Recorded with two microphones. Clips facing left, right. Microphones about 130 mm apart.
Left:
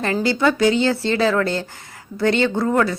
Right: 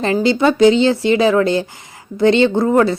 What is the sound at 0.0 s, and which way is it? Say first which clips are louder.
Speech: right 4 dB; 20° right (ahead or behind).